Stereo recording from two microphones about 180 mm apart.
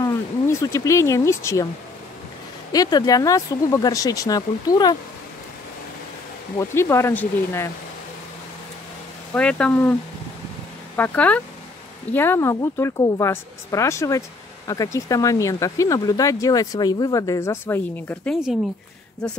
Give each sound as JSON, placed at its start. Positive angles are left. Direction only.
{"t": 0.0, "sound": "speech", "side_deg": 20}
{"t": 2.7, "sound": "speech", "side_deg": 20}
{"t": 6.7, "sound": "a woman's voice", "side_deg": 15}
{"t": 9.3, "sound": "a woman's voice", "side_deg": 5}
{"t": 11.0, "sound": "a woman's voice", "side_deg": 10}
{"t": 18.3, "sound": "speech", "side_deg": 0}